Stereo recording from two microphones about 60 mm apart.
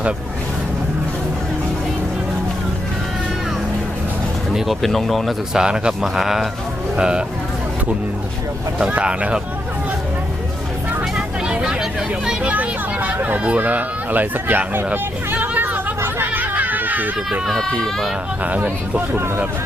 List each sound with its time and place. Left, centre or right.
4.5 s speech: centre
5.5 s speech: centre
6.9 s speech: centre
8.8 s speech: centre
11.4 s hubbub: centre; by 13.4 s right
13.4 s speech: right
15.3 s vehicle: right
16.0 s chatter: right
17.4 s speech: centre
18.4 s speech: right